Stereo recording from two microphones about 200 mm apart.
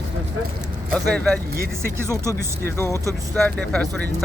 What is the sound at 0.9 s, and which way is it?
Speech, 5° left (ahead or behind).